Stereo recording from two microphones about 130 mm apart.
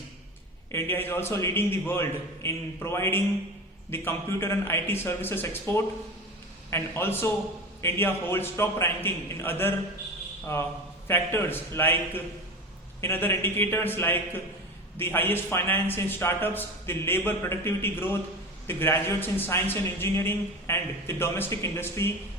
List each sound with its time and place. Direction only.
0.7 s a man's voice: 15° left (ahead or behind)